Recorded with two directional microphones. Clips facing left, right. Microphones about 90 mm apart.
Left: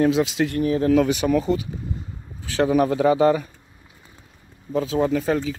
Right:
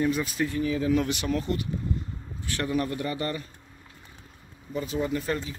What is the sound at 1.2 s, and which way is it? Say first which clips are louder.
Speech: left 8 dB; 80° left.